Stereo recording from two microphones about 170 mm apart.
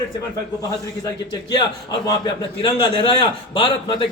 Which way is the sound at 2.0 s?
25° left (ahead or behind).